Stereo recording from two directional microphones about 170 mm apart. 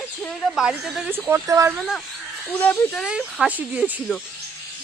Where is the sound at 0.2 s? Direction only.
Centre (ahead or behind); by 1.7 s 15° right (ahead or behind).